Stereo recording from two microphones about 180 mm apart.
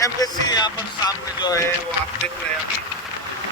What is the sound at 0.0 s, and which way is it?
Speech, 20° left (ahead or behind).